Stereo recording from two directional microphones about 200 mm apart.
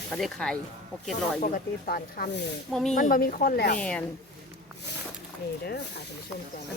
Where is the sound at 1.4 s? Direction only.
45° left (ahead or behind).